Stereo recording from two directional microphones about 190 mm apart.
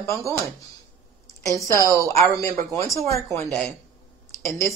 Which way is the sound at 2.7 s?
15° left (ahead or behind).